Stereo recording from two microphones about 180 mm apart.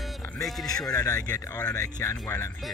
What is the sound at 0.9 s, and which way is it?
Speech, 20° left (ahead or behind).